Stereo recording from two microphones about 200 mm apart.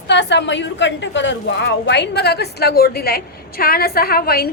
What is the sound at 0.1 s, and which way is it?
A woman's voice, 60° left (ahead or behind).